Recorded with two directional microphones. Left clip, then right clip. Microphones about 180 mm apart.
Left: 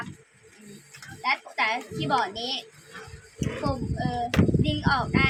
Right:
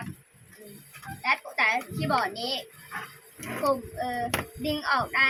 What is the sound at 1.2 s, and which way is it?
A child's voice, 15° left (ahead or behind).